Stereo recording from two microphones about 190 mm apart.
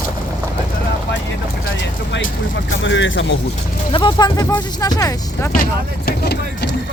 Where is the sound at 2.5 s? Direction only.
75° left (ahead or behind).